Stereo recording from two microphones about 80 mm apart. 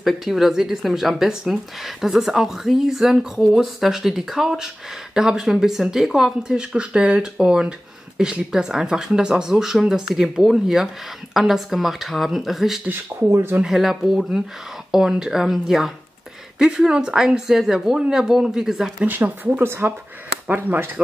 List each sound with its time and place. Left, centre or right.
0.0 s speech: centre
13.3 s speech: right
13.6 s speech: centre
19.0 s speech: right